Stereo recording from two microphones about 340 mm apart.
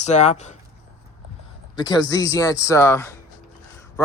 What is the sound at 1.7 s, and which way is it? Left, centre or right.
Speech, centre.